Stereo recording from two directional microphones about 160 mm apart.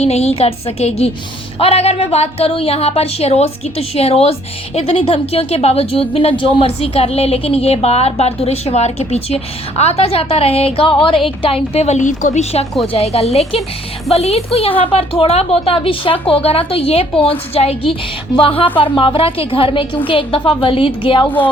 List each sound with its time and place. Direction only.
0.0 s a woman's voice: 40° left (ahead or behind)
21.2 s speech: 10° left (ahead or behind)